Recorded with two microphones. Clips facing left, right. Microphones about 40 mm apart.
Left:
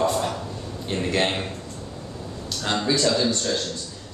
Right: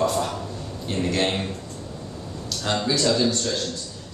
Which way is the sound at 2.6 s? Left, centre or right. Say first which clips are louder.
Even; centre.